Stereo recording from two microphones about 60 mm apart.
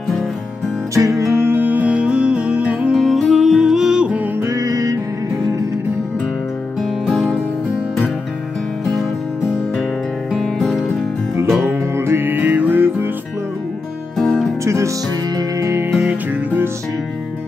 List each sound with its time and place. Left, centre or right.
0.9 s music: right
1.4 s music: right; by 2.9 s centre
2.9 s music: centre
4.5 s music: right
10.4 s music: centre
12.0 s music: right
14.1 s music: centre
14.6 s music: right
15.7 s music: right